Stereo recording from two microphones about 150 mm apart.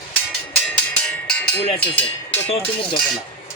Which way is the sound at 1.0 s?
10° left (ahead or behind).